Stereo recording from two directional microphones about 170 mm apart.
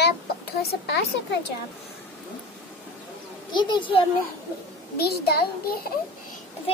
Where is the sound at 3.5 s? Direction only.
25° left (ahead or behind).